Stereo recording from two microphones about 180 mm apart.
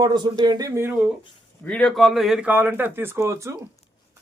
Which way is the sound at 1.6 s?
5° left (ahead or behind).